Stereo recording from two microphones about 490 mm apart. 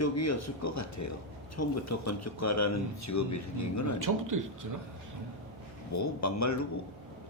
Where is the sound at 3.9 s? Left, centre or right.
Right.